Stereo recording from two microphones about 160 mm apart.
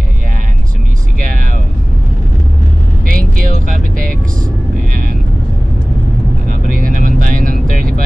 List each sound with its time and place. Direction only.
1.2 s a sound: 60° right (ahead or behind)
3.1 s vehicle: 60° right (ahead or behind)
6.7 s vehicle: 60° right (ahead or behind)